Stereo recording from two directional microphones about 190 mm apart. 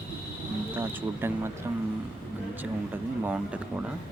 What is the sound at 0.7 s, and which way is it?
Speech, 10° right (ahead or behind).